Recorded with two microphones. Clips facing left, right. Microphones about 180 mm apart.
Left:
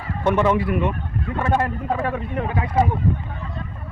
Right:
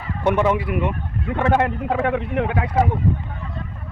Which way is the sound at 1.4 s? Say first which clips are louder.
Right 3 dB; 70° right (ahead or behind).